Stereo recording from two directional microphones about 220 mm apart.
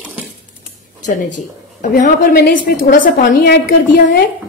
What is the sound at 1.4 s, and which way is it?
A woman's voice, 35° left (ahead or behind).